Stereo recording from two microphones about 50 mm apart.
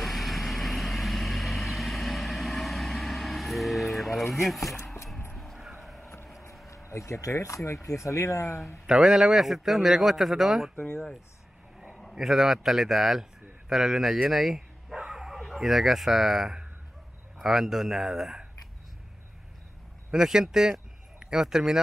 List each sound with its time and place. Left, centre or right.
0.0 s vehicle: centre
5.3 s a sound: centre
6.7 s speech: left
8.8 s a man's voice: centre
12.2 s speech: centre
14.3 s bow-wow: centre
17.4 s speech: centre
20.1 s speech: centre